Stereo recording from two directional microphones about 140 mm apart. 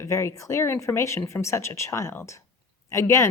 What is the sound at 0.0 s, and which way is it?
A woman's voice, 20° left (ahead or behind).